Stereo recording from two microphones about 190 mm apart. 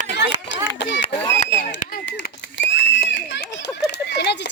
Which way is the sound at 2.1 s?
65° left (ahead or behind).